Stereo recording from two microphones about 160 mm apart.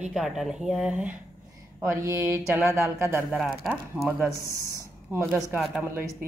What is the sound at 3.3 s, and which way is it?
Speech, centre (ahead or behind).